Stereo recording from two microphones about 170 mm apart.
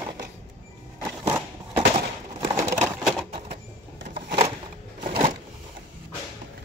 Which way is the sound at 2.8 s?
Centre (ahead or behind).